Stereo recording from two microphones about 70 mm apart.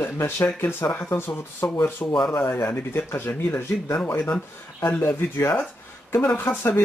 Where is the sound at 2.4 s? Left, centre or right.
Left.